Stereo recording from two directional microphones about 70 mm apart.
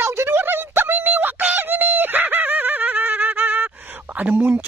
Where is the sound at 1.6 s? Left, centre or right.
Right.